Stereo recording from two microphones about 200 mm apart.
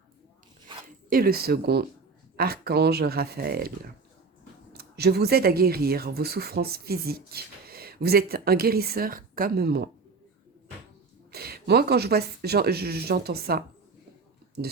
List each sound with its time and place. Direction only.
0.7 s zipper: 25° right (ahead or behind)
1.1 s speech: 50° right (ahead or behind)
4.7 s speech: 55° right (ahead or behind)
11.3 s speech: 50° right (ahead or behind)